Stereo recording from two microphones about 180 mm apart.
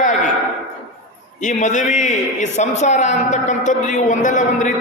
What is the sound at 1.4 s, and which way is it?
A man's voice, 40° left (ahead or behind).